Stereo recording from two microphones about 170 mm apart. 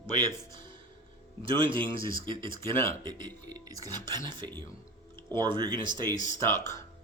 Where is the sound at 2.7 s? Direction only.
15° left (ahead or behind).